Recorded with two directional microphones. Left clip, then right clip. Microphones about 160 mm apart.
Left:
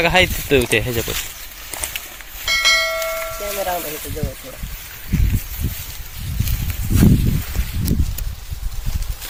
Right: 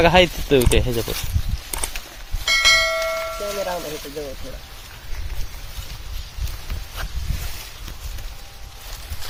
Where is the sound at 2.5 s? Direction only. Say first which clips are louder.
Even; centre (ahead or behind).